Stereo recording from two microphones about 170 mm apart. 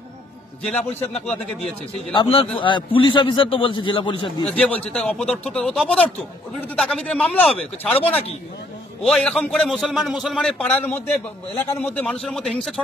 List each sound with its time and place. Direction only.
0.7 s speech: 5° left (ahead or behind)
2.1 s a man's voice: 30° left (ahead or behind)
4.5 s a man's voice: 5° left (ahead or behind)